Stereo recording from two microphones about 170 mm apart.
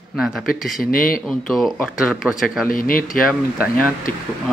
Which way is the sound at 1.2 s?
Centre (ahead or behind).